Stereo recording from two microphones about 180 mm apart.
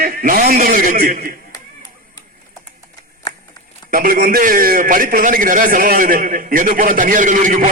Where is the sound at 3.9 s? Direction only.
55° right (ahead or behind).